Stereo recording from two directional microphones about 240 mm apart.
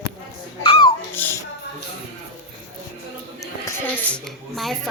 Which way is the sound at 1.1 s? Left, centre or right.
Centre.